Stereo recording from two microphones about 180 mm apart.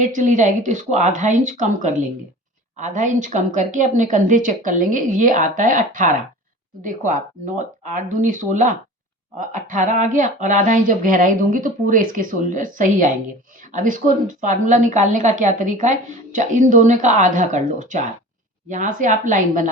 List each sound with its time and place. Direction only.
0.0 s a woman's voice: 45° right (ahead or behind)